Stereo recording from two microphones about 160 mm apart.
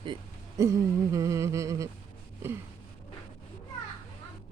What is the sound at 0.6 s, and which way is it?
Humming, 20° right (ahead or behind).